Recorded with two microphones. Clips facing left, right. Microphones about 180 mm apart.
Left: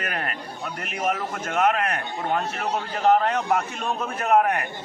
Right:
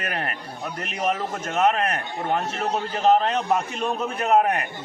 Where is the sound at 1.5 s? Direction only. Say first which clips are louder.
Right 1 dB; 25° right (ahead or behind).